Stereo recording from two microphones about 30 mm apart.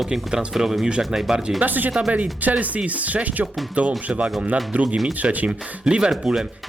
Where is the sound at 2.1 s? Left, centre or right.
Right.